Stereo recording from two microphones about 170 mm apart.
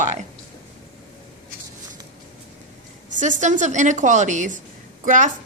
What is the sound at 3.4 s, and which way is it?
A woman's voice, 45° right (ahead or behind).